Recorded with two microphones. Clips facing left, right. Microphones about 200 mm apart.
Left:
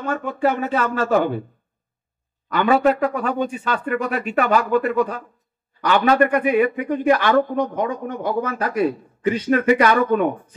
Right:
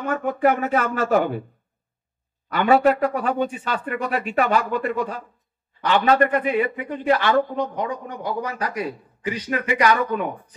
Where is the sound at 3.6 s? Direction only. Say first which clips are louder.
Left 3 dB; 45° left (ahead or behind).